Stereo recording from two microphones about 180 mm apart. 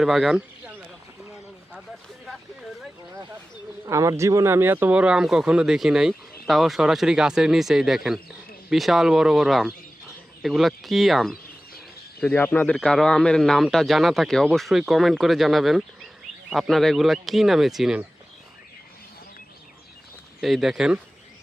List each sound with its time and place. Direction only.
0.0 s bird: centre (ahead or behind)
3.8 s speech: 15° right (ahead or behind); by 11.3 s centre (ahead or behind)
12.2 s speech: 10° left (ahead or behind)
20.4 s speech: centre (ahead or behind)